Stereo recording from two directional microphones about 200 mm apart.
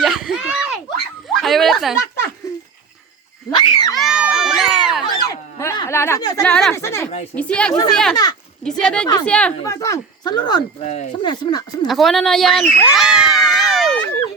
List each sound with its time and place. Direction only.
0.0 s a sound: centre (ahead or behind)
1.3 s bow-wow: centre (ahead or behind)
3.5 s cat: 20° left (ahead or behind)
3.9 s crowd: centre (ahead or behind)
5.3 s a sound: 15° left (ahead or behind)
6.4 s speech: 5° left (ahead or behind)
7.7 s speech: 20° left (ahead or behind)
8.6 s speech: 5° left (ahead or behind)
9.6 s speech: 15° left (ahead or behind)
11.9 s speech: centre (ahead or behind)
12.8 s cat: 5° right (ahead or behind)